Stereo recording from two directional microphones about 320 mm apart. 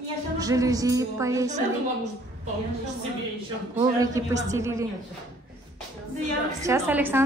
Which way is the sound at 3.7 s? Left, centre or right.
Centre.